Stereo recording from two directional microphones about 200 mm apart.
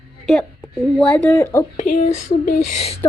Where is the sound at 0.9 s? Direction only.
5° left (ahead or behind).